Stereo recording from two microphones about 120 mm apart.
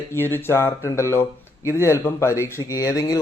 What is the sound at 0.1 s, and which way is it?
Speech, 20° left (ahead or behind).